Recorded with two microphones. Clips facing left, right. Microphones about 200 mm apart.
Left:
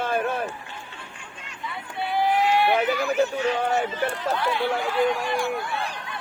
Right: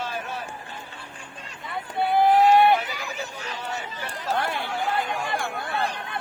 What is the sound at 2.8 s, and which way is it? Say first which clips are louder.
Chatter: left 11 dB; 55° left (ahead or behind).